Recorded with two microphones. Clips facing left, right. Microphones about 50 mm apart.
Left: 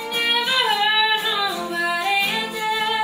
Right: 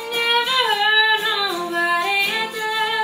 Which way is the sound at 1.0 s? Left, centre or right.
Centre.